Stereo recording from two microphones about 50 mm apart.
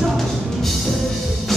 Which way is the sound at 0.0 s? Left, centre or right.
Centre.